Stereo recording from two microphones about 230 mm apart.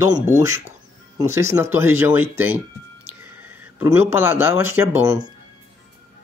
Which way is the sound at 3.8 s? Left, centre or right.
Centre.